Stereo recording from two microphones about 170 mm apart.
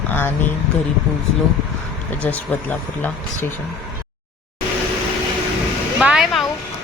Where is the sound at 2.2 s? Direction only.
10° left (ahead or behind).